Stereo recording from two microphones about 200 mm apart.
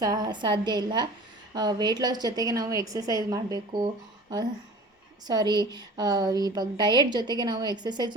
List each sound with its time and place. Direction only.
0.0 s a woman's voice: 20° right (ahead or behind)
5.2 s a woman's voice: 20° right (ahead or behind)